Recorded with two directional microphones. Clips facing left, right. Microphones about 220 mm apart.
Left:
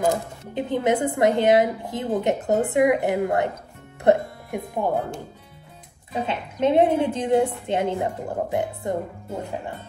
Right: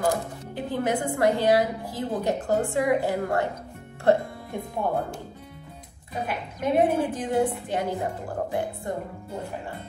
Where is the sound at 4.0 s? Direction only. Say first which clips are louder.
Left 3 dB; 20° left (ahead or behind).